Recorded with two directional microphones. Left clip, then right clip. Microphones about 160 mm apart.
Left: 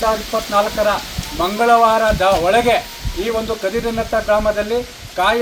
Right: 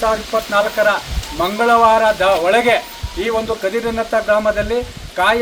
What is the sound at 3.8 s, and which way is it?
A man's voice, 10° right (ahead or behind).